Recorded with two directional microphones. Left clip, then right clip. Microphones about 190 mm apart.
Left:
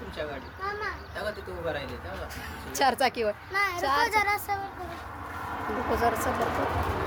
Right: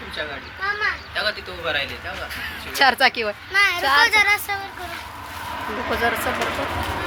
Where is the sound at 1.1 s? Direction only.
30° left (ahead or behind).